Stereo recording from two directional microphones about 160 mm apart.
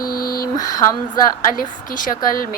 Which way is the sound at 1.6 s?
55° left (ahead or behind).